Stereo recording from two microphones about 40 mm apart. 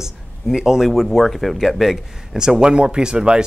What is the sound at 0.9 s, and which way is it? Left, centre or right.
Speech, centre.